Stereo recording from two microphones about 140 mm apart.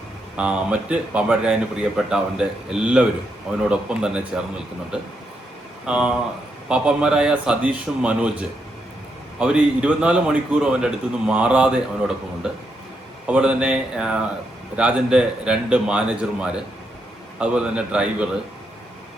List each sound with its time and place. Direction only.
0.3 s a man's voice: 10° right (ahead or behind)